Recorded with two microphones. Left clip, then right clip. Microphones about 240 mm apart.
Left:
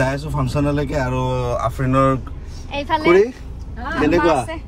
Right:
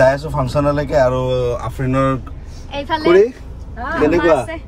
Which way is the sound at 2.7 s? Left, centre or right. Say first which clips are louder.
Right 2 dB; left.